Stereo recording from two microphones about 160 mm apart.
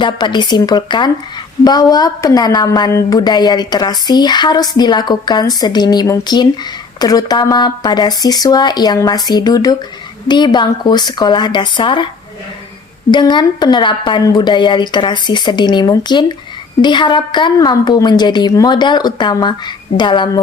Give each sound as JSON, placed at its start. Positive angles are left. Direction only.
{"t": 0.0, "sound": "a woman's voice", "side_deg": 30}
{"t": 13.1, "sound": "a woman's voice", "side_deg": 30}